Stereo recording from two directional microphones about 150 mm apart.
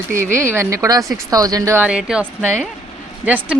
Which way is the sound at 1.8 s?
5° right (ahead or behind).